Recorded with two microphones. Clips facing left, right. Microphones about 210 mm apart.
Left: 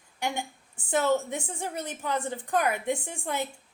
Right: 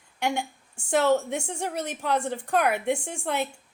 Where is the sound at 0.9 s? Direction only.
70° right (ahead or behind).